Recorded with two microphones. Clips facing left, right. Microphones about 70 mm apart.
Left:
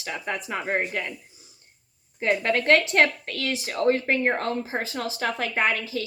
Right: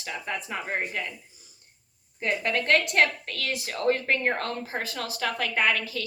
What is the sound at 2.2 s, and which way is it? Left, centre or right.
A woman's voice, left.